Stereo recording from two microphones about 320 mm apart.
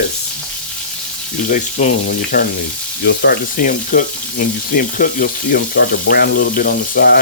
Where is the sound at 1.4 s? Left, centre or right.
Left.